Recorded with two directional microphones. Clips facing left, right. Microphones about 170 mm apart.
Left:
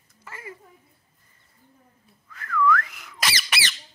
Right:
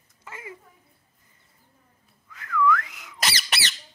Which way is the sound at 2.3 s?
15° right (ahead or behind).